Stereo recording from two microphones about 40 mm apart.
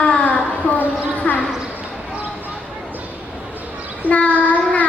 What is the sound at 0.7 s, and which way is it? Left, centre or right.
Speech, left.